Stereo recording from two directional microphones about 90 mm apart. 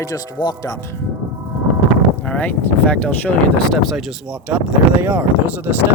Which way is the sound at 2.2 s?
15° left (ahead or behind).